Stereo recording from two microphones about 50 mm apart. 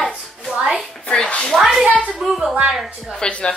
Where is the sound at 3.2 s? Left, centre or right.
Centre.